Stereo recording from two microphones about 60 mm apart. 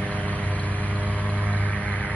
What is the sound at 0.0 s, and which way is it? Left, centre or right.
Vehicle, left.